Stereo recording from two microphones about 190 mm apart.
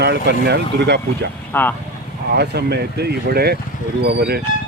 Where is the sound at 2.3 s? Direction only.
60° right (ahead or behind).